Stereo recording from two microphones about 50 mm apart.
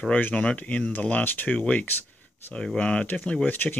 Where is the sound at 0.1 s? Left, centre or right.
Left.